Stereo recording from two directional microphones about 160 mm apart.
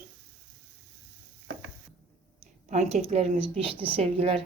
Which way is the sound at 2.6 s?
45° right (ahead or behind).